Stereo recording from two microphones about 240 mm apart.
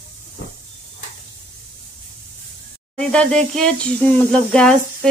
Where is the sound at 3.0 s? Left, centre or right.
Centre.